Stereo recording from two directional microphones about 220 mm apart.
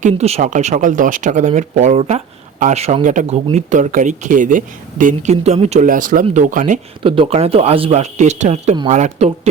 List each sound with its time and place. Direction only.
0.0 s speech: 30° right (ahead or behind)
7.0 s speech: 25° right (ahead or behind)